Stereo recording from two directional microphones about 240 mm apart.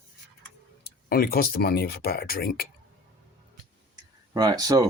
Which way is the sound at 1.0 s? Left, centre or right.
Left.